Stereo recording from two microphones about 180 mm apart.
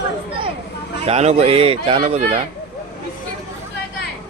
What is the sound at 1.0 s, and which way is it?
Speech, 35° right (ahead or behind).